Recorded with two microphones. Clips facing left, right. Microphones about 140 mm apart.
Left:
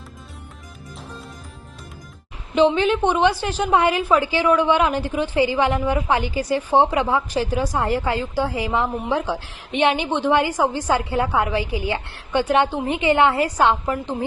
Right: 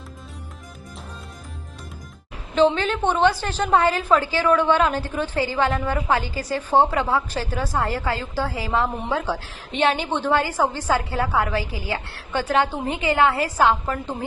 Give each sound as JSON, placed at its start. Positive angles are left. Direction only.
{"t": 2.6, "sound": "a woman's voice", "side_deg": 15}